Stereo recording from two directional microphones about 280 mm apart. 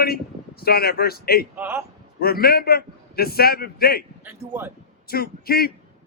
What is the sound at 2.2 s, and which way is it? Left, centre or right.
Speech, left.